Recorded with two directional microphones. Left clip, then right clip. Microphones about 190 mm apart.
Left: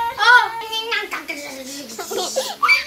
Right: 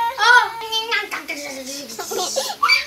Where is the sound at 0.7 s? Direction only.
10° left (ahead or behind).